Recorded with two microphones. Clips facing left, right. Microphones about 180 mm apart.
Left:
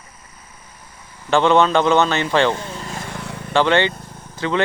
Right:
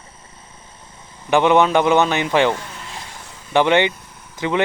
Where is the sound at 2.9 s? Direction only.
60° left (ahead or behind).